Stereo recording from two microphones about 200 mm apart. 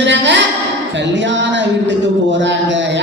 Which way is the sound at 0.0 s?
65° right (ahead or behind).